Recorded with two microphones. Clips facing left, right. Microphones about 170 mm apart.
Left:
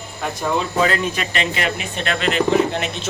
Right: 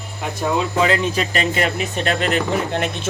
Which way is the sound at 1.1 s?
40° right (ahead or behind).